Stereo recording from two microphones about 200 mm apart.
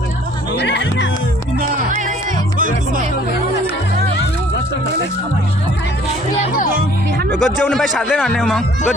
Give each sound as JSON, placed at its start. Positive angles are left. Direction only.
{"t": 0.5, "sound": "music", "side_deg": 60}
{"t": 1.9, "sound": "music", "side_deg": -40}
{"t": 6.7, "sound": "music", "side_deg": -55}
{"t": 7.3, "sound": "speech", "side_deg": 0}